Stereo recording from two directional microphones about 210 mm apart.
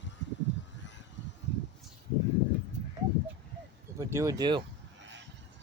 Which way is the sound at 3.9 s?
15° right (ahead or behind).